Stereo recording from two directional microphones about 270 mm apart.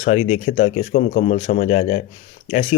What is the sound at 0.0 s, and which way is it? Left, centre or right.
Speech, left.